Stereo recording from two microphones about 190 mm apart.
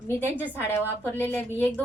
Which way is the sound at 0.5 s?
10° left (ahead or behind).